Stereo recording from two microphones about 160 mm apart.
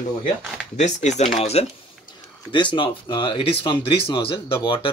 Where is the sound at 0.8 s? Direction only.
45° left (ahead or behind).